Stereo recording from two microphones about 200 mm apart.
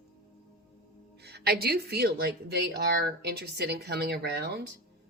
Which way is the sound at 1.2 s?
55° right (ahead or behind).